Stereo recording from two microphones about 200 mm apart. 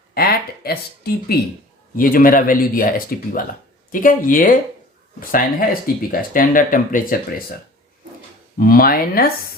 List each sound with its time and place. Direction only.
0.1 s speech: 50° left (ahead or behind)
8.5 s speech: 50° left (ahead or behind)